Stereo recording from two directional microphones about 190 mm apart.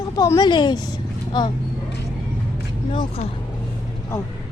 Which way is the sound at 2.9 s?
30° left (ahead or behind).